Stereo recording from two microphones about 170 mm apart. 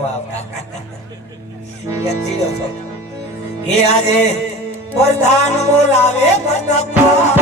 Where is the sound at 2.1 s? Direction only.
40° left (ahead or behind).